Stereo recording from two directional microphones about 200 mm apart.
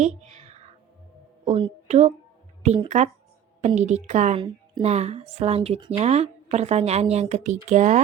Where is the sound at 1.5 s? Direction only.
30° right (ahead or behind).